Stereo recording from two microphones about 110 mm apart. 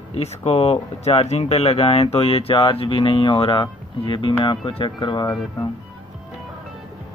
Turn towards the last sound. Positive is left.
turn(degrees=30)  # may be behind; listen again after turning